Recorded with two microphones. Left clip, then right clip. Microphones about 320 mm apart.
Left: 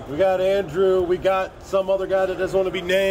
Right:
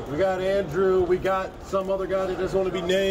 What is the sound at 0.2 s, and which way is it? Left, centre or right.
A man's voice, centre.